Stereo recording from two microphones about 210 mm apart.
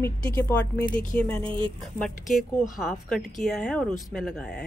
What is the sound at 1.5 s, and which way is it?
Speech, 25° right (ahead or behind).